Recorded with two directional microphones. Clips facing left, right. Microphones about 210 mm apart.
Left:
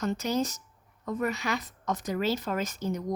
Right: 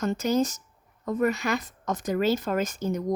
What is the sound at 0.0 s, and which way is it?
Speech, 50° right (ahead or behind).